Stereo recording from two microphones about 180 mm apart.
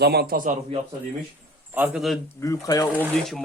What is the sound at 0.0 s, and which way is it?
Speech, 65° right (ahead or behind).